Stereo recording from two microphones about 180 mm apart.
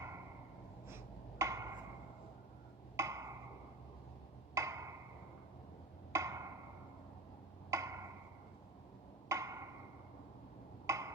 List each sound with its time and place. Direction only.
0.9 s a sound: 15° right (ahead or behind)
2.9 s wood block: 15° right (ahead or behind)
4.5 s wood block: 15° right (ahead or behind)
6.1 s wood block: 15° right (ahead or behind)
7.7 s tick-tock: 15° right (ahead or behind)
9.3 s wood block: 15° right (ahead or behind)
10.8 s a sound: 15° right (ahead or behind)